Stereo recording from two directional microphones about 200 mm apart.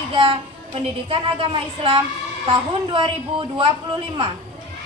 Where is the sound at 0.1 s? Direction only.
25° right (ahead or behind).